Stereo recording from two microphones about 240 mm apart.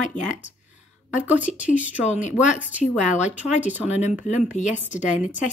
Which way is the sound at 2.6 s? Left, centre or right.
Centre.